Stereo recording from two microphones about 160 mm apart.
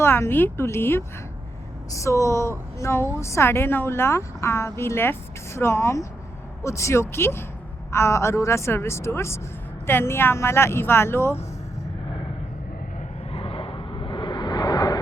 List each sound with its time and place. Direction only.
0.0 s a woman's voice: 15° left (ahead or behind)
13.3 s vehicle: 35° left (ahead or behind)